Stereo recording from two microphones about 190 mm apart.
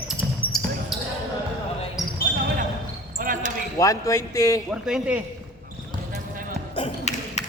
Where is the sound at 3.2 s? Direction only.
45° right (ahead or behind).